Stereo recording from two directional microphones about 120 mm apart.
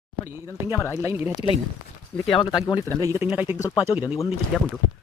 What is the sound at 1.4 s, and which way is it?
Speech, 50° left (ahead or behind).